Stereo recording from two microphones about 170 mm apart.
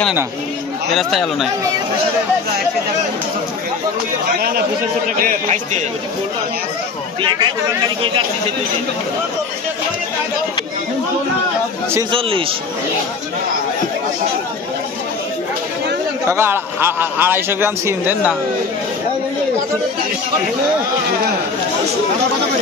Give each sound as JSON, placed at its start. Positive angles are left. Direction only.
{"t": 0.9, "sound": "speech", "side_deg": 0}
{"t": 5.2, "sound": "a man's voice", "side_deg": -45}
{"t": 7.2, "sound": "speech", "side_deg": -25}
{"t": 12.1, "sound": "a man's voice", "side_deg": -30}
{"t": 16.3, "sound": "a man's voice", "side_deg": -15}